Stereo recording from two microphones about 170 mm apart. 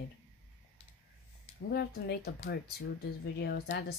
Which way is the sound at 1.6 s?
70° left (ahead or behind).